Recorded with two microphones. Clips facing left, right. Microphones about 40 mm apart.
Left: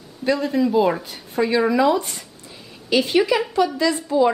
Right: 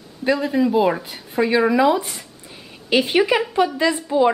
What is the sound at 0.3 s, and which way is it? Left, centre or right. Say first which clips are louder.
Speech: right 1 dB; centre.